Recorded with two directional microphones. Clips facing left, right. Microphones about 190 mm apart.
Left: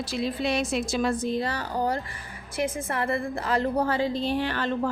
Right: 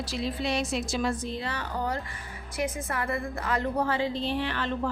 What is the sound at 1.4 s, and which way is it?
A woman's voice, 35° left (ahead or behind).